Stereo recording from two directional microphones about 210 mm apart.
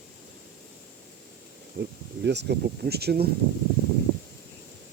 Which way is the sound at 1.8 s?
55° right (ahead or behind).